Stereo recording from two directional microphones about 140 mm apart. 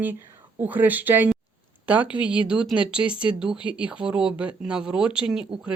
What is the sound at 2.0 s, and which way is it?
Speech, 35° left (ahead or behind).